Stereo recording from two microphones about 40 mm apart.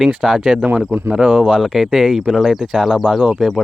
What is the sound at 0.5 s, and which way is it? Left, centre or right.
Speech, right.